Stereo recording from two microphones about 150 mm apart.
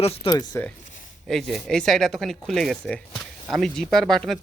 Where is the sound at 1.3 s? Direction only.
5° left (ahead or behind).